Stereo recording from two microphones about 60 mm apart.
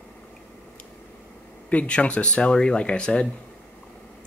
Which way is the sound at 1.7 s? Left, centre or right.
Left.